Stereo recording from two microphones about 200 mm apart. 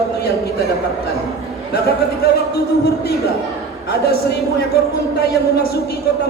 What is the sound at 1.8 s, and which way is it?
Speech, 50° left (ahead or behind).